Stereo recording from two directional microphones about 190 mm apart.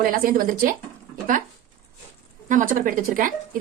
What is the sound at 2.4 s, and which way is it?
Speech, 45° right (ahead or behind).